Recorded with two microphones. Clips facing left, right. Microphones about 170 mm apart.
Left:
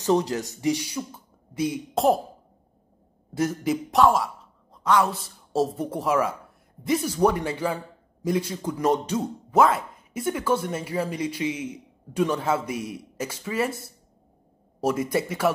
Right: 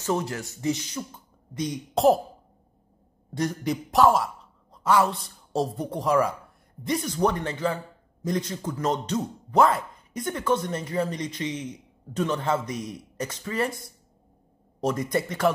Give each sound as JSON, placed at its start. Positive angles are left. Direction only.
{"t": 0.0, "sound": "a man's voice", "side_deg": 15}
{"t": 3.3, "sound": "a man's voice", "side_deg": 5}